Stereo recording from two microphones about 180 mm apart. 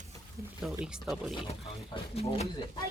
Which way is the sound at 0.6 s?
5° right (ahead or behind).